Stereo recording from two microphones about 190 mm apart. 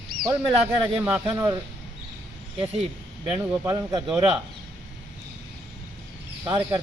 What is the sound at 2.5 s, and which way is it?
Speech, 30° right (ahead or behind).